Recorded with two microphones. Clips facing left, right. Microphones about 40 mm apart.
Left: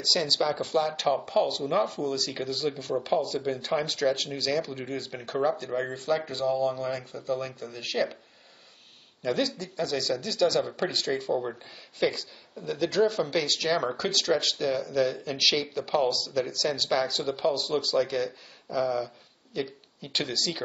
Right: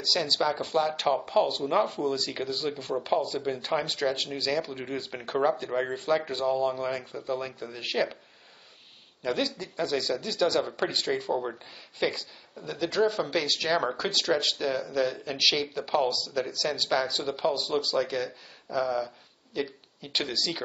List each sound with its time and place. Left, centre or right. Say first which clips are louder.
0.0 s speech: even; centre
9.2 s speech: left 1 dB; centre